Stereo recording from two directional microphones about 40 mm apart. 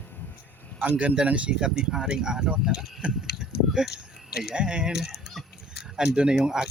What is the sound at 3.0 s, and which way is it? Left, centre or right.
Speech, right.